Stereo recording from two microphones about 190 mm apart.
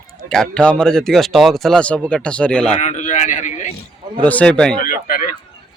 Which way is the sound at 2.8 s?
40° left (ahead or behind).